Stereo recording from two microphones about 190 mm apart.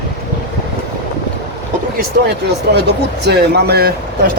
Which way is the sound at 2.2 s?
55° right (ahead or behind).